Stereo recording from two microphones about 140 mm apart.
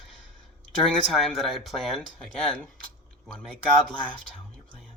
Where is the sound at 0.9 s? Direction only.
Centre (ahead or behind).